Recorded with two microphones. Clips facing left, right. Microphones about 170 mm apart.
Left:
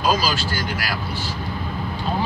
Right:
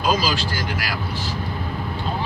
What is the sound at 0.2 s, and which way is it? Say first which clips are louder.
Speech: even; 15° right (ahead or behind).